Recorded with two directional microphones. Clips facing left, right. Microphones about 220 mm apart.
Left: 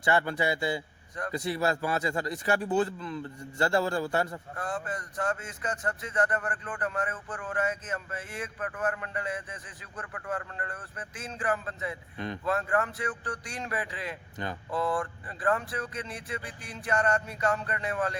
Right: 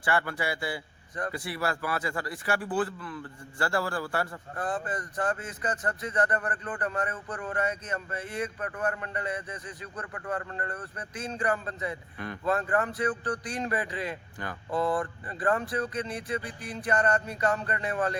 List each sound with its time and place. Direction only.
0.0 s a man's voice: 20° left (ahead or behind)
4.6 s speech: centre (ahead or behind)
12.1 s a man's voice: 20° left (ahead or behind)
12.7 s speech: centre (ahead or behind)
14.4 s a man's voice: 20° left (ahead or behind)
14.9 s speech: centre (ahead or behind)